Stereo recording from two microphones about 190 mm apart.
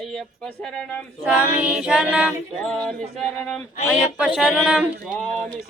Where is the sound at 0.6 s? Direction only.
Centre (ahead or behind).